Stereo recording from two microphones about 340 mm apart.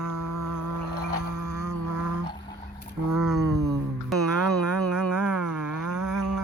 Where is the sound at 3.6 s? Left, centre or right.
Right.